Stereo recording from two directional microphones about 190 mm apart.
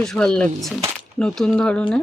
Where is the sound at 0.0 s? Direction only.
5° left (ahead or behind).